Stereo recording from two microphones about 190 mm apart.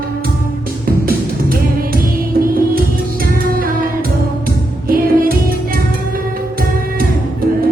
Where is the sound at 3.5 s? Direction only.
50° right (ahead or behind).